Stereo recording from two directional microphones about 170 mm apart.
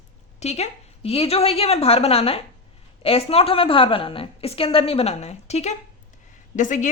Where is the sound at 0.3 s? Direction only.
40° left (ahead or behind).